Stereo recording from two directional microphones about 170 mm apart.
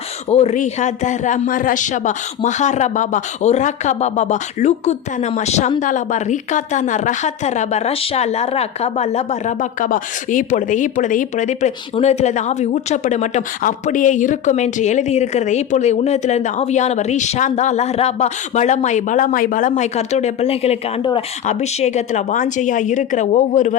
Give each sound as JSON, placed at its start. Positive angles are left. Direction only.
{"t": 0.3, "sound": "a woman's voice", "side_deg": 40}